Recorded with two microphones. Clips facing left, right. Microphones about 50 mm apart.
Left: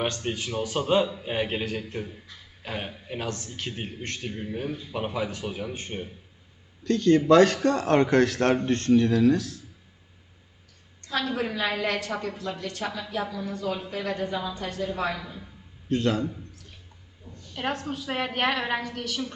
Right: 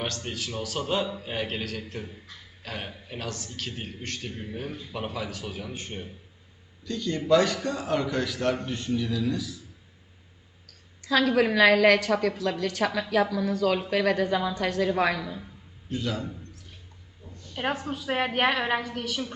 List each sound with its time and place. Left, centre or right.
0.0 s speech: centre
6.8 s speech: left
11.0 s speech: right
15.9 s speech: left
17.5 s a woman's voice: centre